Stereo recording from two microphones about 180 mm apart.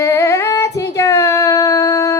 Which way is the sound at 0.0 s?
15° left (ahead or behind).